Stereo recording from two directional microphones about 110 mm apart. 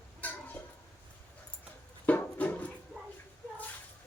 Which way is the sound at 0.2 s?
15° left (ahead or behind).